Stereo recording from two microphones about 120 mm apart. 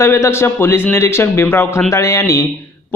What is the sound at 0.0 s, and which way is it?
Speech, 20° left (ahead or behind).